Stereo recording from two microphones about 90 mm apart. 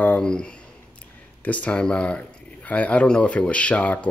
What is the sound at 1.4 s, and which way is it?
Speech, 15° left (ahead or behind).